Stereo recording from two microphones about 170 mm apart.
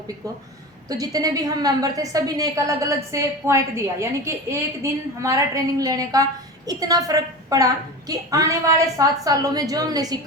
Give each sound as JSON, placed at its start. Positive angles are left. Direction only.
{"t": 0.9, "sound": "a woman's voice", "side_deg": -20}